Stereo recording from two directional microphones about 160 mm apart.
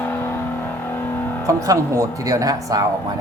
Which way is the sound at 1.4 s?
20° right (ahead or behind).